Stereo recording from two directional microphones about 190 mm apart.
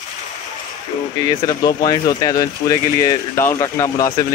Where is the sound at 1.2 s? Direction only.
20° left (ahead or behind).